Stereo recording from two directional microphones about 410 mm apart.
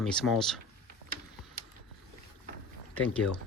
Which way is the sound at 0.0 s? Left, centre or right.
Centre.